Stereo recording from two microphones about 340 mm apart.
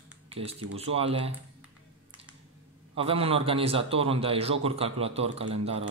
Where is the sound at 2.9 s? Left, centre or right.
Centre.